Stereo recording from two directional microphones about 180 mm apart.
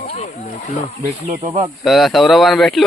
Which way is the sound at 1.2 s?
40° right (ahead or behind).